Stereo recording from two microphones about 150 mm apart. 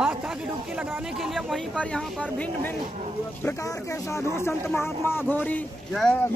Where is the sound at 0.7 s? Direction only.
Centre (ahead or behind).